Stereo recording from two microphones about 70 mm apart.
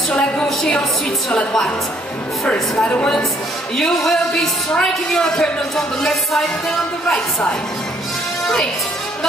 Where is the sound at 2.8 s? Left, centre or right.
Centre.